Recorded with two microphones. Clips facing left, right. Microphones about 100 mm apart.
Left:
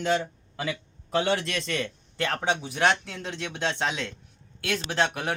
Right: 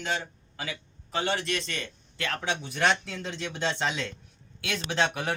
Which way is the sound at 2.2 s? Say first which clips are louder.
Left 4 dB; 40° left (ahead or behind).